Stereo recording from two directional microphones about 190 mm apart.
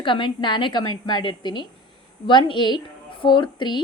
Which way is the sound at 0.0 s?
25° left (ahead or behind).